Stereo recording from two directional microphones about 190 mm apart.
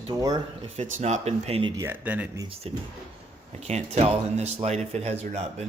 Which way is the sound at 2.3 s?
30° right (ahead or behind).